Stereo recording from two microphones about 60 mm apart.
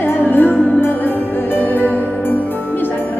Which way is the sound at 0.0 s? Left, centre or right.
Left.